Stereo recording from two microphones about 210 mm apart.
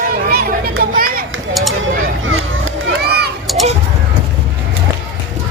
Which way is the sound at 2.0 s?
70° right (ahead or behind).